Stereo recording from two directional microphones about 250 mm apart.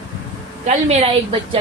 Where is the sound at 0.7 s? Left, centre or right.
Right.